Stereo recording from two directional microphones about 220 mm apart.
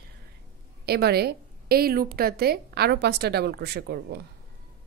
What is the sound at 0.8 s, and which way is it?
A woman's voice, 45° right (ahead or behind).